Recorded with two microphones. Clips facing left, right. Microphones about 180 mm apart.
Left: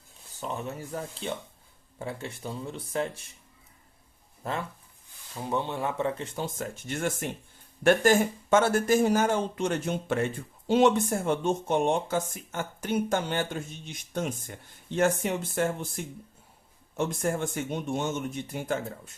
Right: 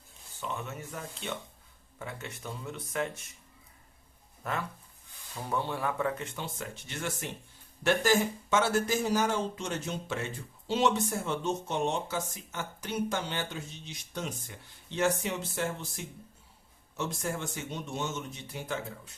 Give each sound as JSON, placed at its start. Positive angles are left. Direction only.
{"t": 0.3, "sound": "speech", "side_deg": 35}
{"t": 4.4, "sound": "speech", "side_deg": 30}